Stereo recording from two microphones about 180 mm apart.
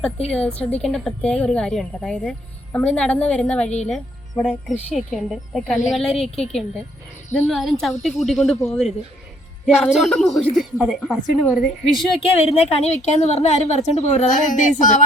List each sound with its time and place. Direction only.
0.3 s a woman's voice: 5° left (ahead or behind)
12.3 s a woman's voice: 35° left (ahead or behind)